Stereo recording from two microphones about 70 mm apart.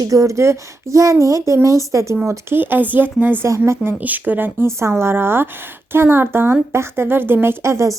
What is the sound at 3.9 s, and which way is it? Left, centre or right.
A woman's voice, right.